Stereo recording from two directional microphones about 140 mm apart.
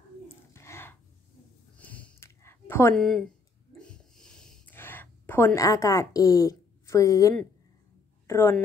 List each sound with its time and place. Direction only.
0.5 s a sound: 20° left (ahead or behind)
3.0 s speech: 5° left (ahead or behind)
3.7 s snort: 5° left (ahead or behind)
4.7 s a woman's voice: 15° left (ahead or behind)